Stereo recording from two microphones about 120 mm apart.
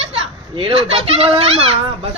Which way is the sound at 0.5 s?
50° right (ahead or behind).